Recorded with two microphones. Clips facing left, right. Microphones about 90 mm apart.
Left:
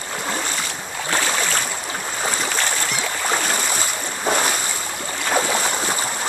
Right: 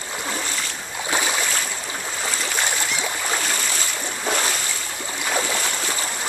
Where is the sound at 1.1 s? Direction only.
15° right (ahead or behind).